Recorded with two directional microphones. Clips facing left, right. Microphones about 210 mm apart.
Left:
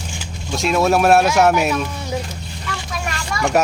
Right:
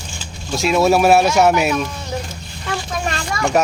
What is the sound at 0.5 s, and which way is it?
Speech, 5° right (ahead or behind).